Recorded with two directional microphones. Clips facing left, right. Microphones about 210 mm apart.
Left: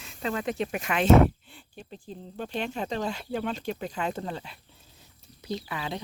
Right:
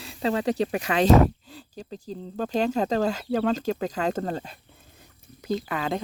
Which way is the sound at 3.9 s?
40° right (ahead or behind).